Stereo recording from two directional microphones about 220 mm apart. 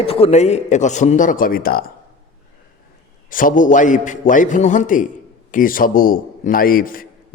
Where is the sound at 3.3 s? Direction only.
40° left (ahead or behind).